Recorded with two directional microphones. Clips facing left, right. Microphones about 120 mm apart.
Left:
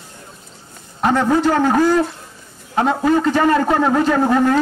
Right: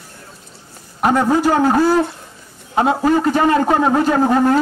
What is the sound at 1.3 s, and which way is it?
Speech, 10° right (ahead or behind).